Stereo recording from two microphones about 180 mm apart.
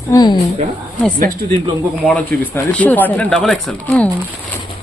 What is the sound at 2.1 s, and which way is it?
Speech, 10° left (ahead or behind).